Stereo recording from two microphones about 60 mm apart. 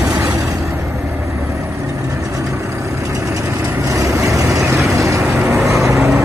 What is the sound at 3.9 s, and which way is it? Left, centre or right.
Vehicle, right.